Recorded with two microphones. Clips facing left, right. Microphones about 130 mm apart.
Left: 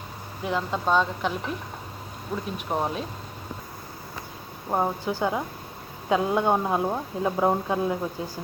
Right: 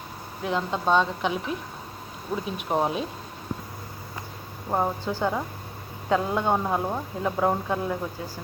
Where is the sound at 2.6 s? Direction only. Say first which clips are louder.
Right 3 dB; 10° right (ahead or behind).